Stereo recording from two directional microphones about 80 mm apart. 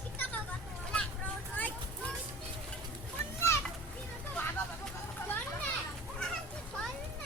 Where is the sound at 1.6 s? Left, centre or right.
Left.